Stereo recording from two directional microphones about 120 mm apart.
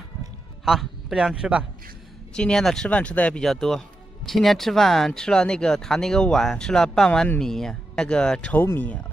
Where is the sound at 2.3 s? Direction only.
5° left (ahead or behind).